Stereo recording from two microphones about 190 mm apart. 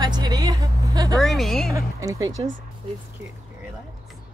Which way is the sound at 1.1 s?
Centre (ahead or behind).